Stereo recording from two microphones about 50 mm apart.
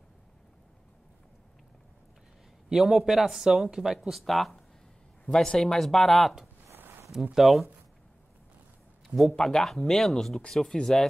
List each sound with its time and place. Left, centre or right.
2.7 s speech: centre
5.2 s speech: centre
6.8 s a sound: right
7.3 s speech: centre
9.0 s a sound: centre
9.3 s speech: centre